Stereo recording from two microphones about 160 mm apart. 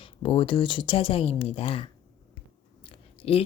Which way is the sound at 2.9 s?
35° left (ahead or behind).